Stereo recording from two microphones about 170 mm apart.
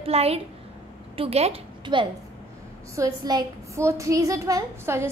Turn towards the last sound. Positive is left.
turn(degrees=-15)  # may be behind; listen again after turning